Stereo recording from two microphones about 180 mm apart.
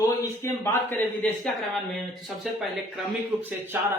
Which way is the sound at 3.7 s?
10° right (ahead or behind).